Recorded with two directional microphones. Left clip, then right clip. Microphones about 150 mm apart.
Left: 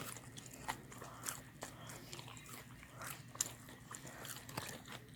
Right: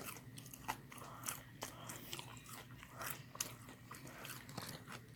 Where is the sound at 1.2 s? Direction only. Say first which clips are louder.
Right 1 dB; 15° right (ahead or behind).